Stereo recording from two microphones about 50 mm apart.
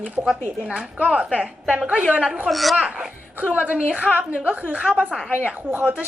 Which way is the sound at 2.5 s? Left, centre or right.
Centre.